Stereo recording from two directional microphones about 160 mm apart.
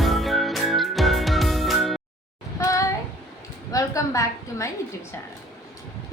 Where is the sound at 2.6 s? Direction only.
20° left (ahead or behind).